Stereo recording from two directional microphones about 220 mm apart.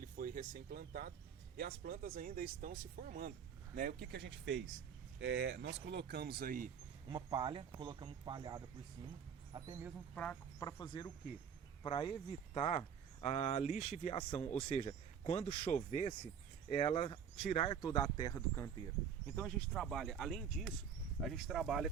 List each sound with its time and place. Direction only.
0.0 s speech: 40° right (ahead or behind)
7.1 s speech: 20° right (ahead or behind)
10.2 s speech: 10° left (ahead or behind)